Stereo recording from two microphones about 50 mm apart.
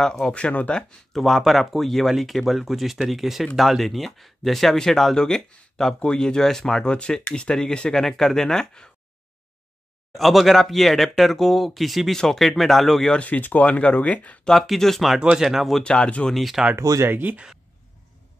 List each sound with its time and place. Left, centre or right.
0.0 s speech: centre
0.3 s speech: left
1.1 s speech: centre
10.1 s speech: centre
13.1 s speech: left
14.4 s speech: centre
15.3 s speech: centre
15.8 s speech: centre
16.3 s speech: centre
17.1 s speech: right